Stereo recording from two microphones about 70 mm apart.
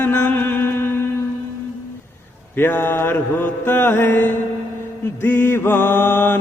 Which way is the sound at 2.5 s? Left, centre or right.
Left.